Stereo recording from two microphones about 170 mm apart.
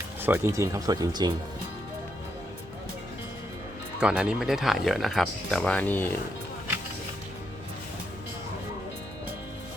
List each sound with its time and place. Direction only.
0.2 s speech: 10° right (ahead or behind)
4.0 s speech: 5° right (ahead or behind); by 6.1 s 10° left (ahead or behind)